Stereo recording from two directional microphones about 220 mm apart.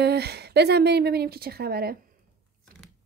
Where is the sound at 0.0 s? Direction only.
50° right (ahead or behind).